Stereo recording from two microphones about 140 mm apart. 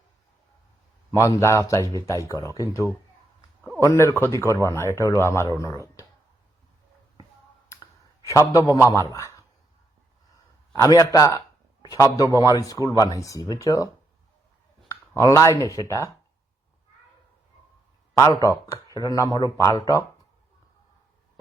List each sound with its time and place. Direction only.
1.1 s speech: 20° left (ahead or behind)
8.3 s speech: 25° left (ahead or behind)
10.7 s a man's voice: 25° left (ahead or behind)
14.8 s a sound: 20° left (ahead or behind)
15.5 s speech: 25° left (ahead or behind)
18.2 s speech: 20° left (ahead or behind)